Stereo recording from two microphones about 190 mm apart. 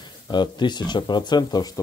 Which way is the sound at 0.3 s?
25° left (ahead or behind).